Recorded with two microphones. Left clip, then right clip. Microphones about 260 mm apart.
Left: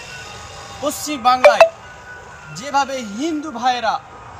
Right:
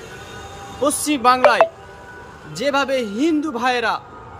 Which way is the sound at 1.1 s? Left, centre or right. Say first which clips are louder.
Left 3 dB; right.